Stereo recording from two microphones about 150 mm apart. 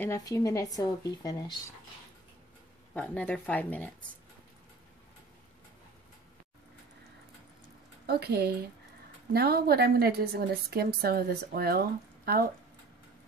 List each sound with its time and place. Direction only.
0.0 s speech: 20° left (ahead or behind)
2.9 s speech: 10° left (ahead or behind)
8.1 s a woman's voice: 90° right